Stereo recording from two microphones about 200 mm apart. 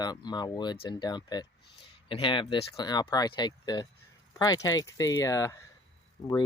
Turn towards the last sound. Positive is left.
turn(degrees=20)  # may be behind; listen again after turning